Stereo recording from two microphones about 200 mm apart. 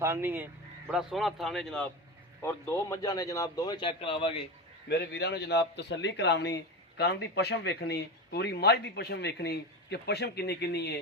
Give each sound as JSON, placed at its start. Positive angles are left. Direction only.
{"t": 0.0, "sound": "a man's voice", "side_deg": -10}
{"t": 4.9, "sound": "a man's voice", "side_deg": 55}